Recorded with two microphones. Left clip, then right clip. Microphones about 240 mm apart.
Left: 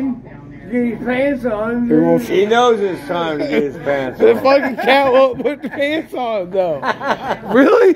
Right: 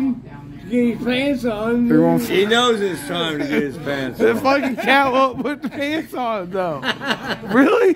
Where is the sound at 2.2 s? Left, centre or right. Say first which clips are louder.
Left 4 dB; right.